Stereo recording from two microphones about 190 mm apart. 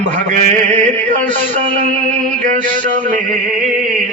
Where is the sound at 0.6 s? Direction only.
40° right (ahead or behind).